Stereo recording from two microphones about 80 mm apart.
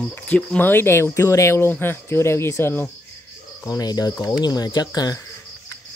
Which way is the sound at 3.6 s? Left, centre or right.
Left.